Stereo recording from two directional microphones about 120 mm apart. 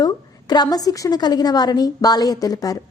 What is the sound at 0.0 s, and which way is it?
A woman's voice, 35° left (ahead or behind).